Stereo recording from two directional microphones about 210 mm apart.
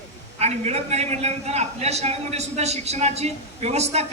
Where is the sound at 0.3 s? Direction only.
30° right (ahead or behind).